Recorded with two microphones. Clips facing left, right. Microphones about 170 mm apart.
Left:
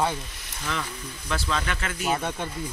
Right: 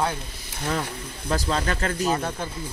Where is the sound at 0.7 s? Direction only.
35° right (ahead or behind).